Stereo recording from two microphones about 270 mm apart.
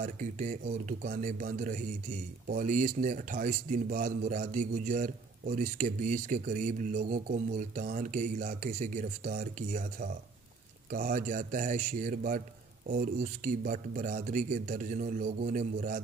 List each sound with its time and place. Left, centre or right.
0.0 s a man's voice: right